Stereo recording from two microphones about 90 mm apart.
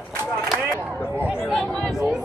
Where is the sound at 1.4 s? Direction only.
10° left (ahead or behind).